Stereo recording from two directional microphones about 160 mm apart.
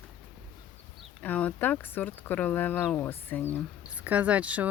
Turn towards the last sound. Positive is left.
turn(degrees=-10)  # may be behind; listen again after turning